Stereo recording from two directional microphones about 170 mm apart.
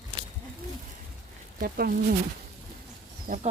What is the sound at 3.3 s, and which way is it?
Speech, 55° right (ahead or behind).